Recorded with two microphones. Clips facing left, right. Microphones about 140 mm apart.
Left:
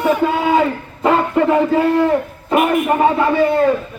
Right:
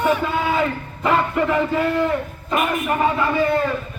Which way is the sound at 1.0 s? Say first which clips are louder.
Left 5 dB; 30° left (ahead or behind).